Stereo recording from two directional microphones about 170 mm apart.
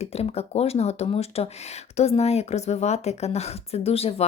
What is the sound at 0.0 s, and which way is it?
Speech, 35° left (ahead or behind).